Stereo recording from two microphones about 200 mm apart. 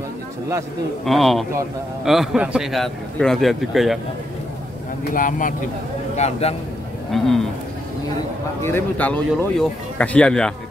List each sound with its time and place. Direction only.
1.0 s a man's voice: centre (ahead or behind)
5.1 s speech: 40° left (ahead or behind)
7.1 s a man's voice: centre (ahead or behind)
8.6 s a man's voice: 10° left (ahead or behind)